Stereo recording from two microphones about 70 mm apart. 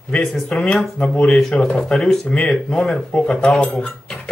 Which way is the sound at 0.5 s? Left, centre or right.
Centre.